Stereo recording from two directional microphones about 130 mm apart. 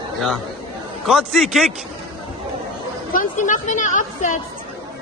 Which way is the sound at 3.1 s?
85° left.